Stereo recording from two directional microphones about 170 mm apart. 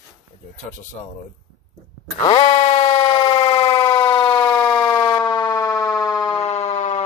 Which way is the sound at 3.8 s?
25° left (ahead or behind).